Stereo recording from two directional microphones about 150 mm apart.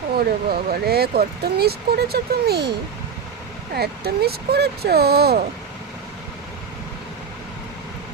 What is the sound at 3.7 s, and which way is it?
Speech, 90° right.